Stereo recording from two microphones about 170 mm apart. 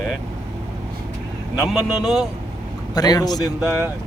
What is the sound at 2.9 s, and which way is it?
Speech, 25° left (ahead or behind).